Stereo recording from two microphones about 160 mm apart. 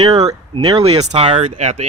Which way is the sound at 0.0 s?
40° right (ahead or behind).